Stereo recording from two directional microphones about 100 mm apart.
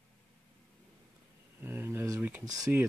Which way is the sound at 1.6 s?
20° right (ahead or behind).